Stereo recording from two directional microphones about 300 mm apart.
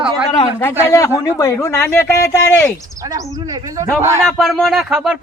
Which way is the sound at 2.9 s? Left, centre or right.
Centre.